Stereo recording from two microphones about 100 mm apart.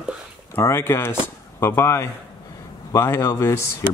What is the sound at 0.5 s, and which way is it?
Speech, 25° left (ahead or behind).